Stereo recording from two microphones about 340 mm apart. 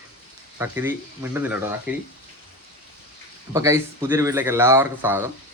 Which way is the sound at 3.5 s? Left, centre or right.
Centre.